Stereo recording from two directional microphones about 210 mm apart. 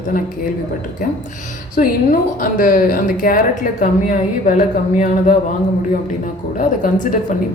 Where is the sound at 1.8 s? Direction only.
35° left (ahead or behind).